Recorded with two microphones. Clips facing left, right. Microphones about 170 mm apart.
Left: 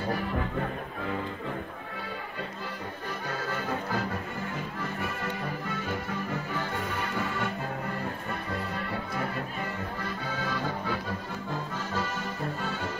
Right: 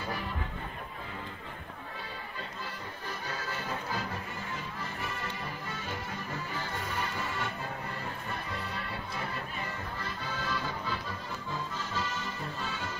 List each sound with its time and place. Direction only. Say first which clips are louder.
3.3 s music: left 6 dB; 55° left (ahead or behind)
7.2 s music: left 5 dB; 55° left (ahead or behind)
10.0 s music: left 2 dB; 55° left (ahead or behind)